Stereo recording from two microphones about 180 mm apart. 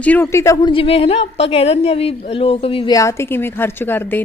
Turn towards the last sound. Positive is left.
turn(degrees=10)  # may be behind; listen again after turning